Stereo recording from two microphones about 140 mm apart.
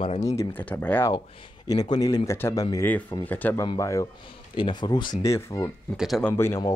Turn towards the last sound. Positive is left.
turn(degrees=20)  # may be behind; listen again after turning